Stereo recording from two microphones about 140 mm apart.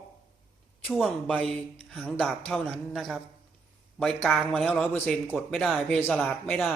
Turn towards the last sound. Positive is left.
turn(degrees=10)  # may be behind; listen again after turning